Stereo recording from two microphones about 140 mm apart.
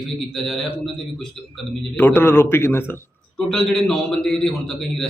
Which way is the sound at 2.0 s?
15° left (ahead or behind).